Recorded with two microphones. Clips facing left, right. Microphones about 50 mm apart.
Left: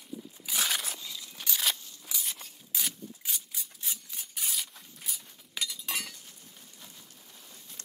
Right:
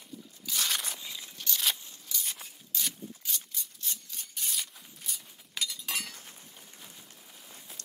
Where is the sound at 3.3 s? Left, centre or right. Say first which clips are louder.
Right 1 dB; centre.